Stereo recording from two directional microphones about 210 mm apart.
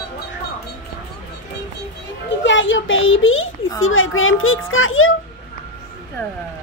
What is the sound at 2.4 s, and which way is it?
A child's voice, 60° left (ahead or behind).